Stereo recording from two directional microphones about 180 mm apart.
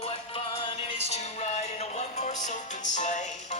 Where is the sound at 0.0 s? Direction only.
35° left (ahead or behind).